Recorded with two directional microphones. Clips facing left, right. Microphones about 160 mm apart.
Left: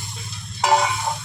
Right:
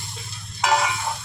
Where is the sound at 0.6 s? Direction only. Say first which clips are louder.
Left 3 dB; 30° left (ahead or behind).